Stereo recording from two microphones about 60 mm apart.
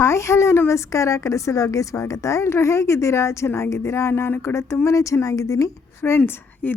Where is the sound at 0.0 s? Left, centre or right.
Left.